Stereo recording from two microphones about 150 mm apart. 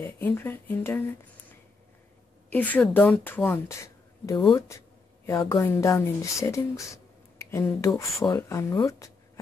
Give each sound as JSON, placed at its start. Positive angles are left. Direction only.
{"t": 0.0, "sound": "speech", "side_deg": 15}
{"t": 2.5, "sound": "speech", "side_deg": 10}
{"t": 3.6, "sound": "speech", "side_deg": 20}